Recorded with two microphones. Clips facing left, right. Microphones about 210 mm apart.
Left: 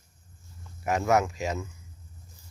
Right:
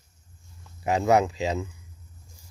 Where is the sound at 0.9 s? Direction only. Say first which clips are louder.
Right 3 dB; 25° right (ahead or behind).